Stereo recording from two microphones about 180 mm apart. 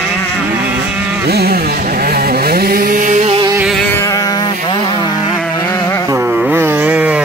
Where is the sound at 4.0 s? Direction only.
20° left (ahead or behind).